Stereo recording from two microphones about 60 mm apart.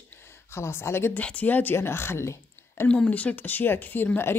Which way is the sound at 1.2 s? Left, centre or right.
Left.